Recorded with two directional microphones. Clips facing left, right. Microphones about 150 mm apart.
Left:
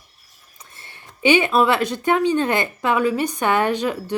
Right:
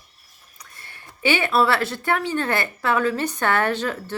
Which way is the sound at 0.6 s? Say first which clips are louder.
Left 1 dB; 25° left (ahead or behind).